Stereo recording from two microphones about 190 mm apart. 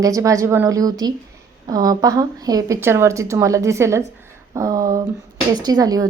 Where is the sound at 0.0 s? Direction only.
15° right (ahead or behind).